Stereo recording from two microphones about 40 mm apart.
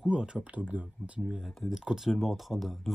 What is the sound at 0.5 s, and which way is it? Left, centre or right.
Speech, right.